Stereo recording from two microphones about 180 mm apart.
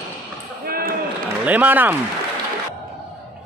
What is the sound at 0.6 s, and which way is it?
Basketball bounce, 55° right (ahead or behind).